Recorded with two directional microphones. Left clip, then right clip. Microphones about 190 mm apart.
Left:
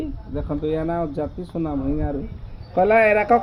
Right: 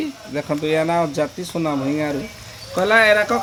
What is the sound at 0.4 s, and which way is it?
Speech, 25° right (ahead or behind).